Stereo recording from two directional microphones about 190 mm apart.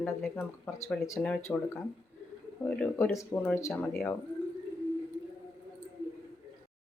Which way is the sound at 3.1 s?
15° left (ahead or behind).